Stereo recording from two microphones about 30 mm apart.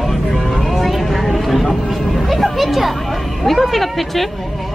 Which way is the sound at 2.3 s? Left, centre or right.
Centre.